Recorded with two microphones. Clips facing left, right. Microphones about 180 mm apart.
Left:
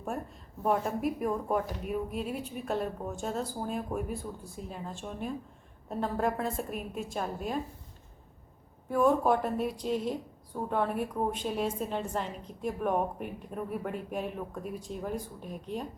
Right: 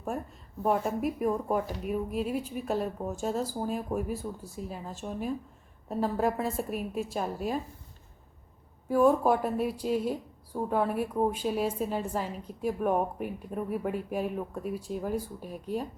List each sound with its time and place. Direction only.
0.6 s speech: centre (ahead or behind)
8.9 s speech: 5° right (ahead or behind)